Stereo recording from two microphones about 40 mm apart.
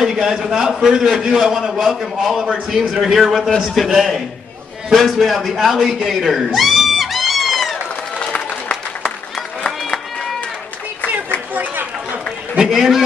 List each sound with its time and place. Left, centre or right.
0.0 s a man's voice: centre
3.5 s a man's voice: centre
3.8 s a man's voice: centre
5.6 s a man's voice: centre
6.0 s a sound: centre
12.7 s a man's voice: centre